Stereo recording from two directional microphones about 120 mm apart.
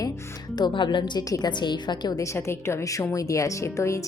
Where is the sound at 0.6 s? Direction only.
40° left (ahead or behind).